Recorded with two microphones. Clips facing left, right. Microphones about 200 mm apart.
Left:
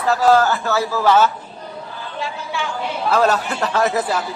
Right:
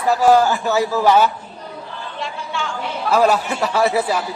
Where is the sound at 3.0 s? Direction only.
10° right (ahead or behind).